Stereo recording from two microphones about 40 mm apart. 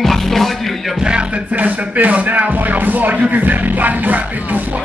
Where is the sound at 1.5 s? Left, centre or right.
Right.